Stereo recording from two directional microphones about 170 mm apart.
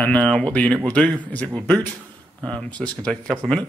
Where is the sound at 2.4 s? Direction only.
5° left (ahead or behind).